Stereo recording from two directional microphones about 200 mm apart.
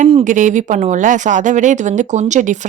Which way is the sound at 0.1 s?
35° right (ahead or behind).